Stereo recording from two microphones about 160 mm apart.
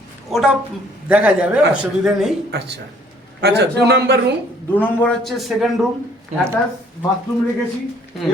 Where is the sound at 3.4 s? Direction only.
90° right.